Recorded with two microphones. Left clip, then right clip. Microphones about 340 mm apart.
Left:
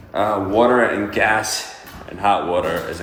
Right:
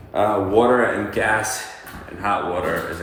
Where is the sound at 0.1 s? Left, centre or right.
Centre.